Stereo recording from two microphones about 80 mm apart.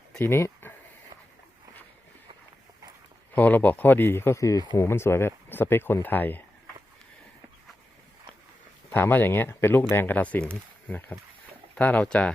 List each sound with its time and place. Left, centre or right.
0.2 s speech: left
3.3 s speech: left
8.9 s speech: left